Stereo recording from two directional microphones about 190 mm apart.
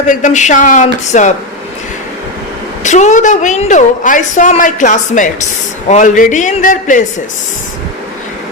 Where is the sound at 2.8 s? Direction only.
40° left (ahead or behind).